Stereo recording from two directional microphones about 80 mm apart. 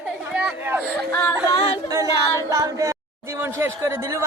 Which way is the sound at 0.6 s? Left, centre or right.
Right.